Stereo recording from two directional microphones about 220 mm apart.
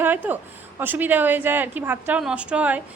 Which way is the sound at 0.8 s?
10° right (ahead or behind).